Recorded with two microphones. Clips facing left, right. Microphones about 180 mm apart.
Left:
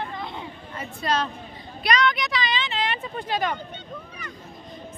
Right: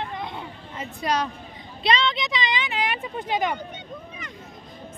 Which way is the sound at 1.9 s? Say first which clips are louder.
Even; 25° right (ahead or behind).